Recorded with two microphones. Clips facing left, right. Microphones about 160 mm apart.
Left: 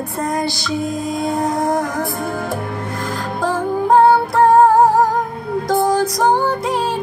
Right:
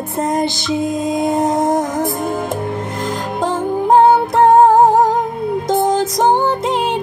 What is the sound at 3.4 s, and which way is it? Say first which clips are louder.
Music: right 1 dB; 20° right (ahead or behind).